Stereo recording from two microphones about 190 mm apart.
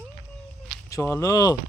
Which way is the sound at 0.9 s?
15° left (ahead or behind).